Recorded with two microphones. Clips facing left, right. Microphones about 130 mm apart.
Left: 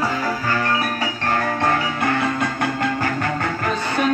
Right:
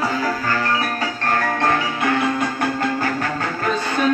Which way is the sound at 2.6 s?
35° right (ahead or behind).